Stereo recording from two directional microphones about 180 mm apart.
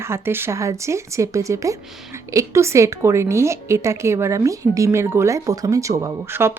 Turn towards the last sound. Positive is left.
turn(degrees=-15)  # may be behind; listen again after turning